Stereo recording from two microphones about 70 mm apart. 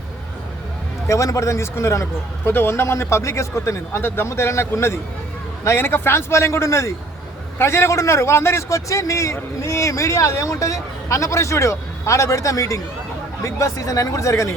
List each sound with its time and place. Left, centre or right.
1.0 s a man's voice: left